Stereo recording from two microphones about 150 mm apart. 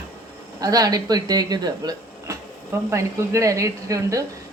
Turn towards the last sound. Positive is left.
turn(degrees=-20)  # may be behind; listen again after turning